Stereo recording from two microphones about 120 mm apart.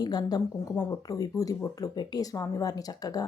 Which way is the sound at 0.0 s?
35° left (ahead or behind).